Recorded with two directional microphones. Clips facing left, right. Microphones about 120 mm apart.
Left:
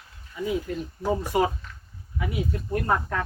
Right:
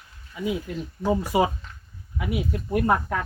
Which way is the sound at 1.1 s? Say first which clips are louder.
Right 2 dB; 10° right (ahead or behind).